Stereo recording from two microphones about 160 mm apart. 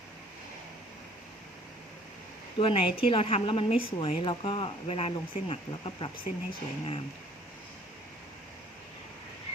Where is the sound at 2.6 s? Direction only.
35° left (ahead or behind).